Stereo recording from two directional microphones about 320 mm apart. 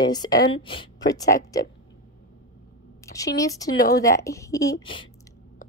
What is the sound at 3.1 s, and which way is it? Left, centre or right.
Speech, centre.